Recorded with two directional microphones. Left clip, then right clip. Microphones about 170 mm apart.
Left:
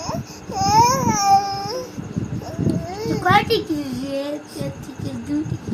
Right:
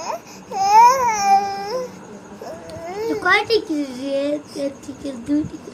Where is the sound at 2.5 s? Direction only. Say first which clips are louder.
Left 4 dB; 10° right (ahead or behind).